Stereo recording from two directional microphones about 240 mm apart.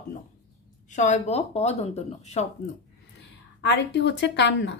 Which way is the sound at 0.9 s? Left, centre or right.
Left.